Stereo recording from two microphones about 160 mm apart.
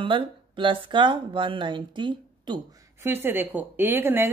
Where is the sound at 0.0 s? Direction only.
30° right (ahead or behind).